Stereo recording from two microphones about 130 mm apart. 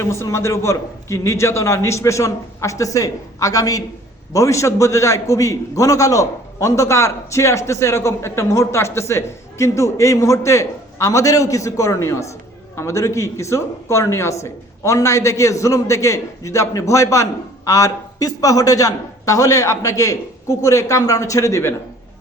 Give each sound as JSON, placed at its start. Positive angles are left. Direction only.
{"t": 0.0, "sound": "a man's voice", "side_deg": 20}